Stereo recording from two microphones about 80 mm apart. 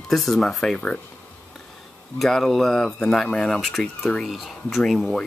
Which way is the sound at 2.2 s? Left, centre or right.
Centre.